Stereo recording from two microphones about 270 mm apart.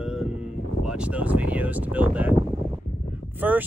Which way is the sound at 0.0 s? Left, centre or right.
Centre.